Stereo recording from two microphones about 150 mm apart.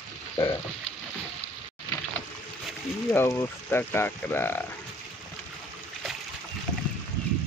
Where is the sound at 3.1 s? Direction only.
15° left (ahead or behind).